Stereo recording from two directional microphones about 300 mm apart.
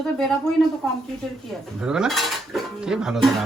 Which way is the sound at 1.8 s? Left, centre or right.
Centre.